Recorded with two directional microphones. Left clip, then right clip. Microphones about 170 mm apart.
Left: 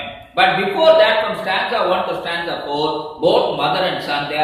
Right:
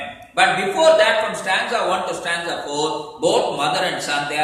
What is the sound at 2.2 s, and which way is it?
A man's voice, 25° right (ahead or behind).